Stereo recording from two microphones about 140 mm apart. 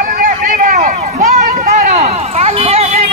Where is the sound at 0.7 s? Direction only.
60° right (ahead or behind).